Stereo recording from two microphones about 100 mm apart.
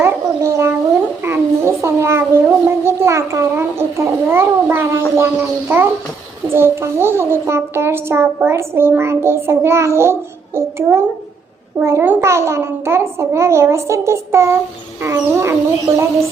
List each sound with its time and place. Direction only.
0.0 s babbling: 25° right (ahead or behind)
1.2 s a sound: 25° right (ahead or behind)
5.1 s a child's voice: 25° right (ahead or behind)